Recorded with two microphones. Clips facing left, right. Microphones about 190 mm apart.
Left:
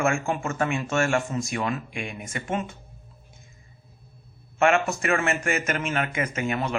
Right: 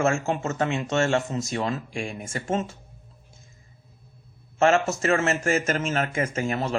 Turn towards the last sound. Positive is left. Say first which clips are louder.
# right 1 dB
turn(degrees=-30)  # may be behind; listen again after turning